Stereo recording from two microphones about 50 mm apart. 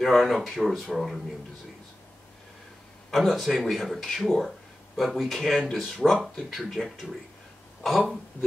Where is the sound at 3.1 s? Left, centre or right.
Centre.